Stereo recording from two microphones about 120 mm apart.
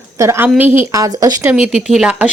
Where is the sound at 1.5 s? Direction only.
10° right (ahead or behind).